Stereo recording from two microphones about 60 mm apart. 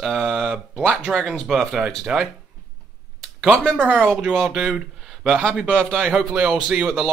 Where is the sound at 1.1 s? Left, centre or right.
Right.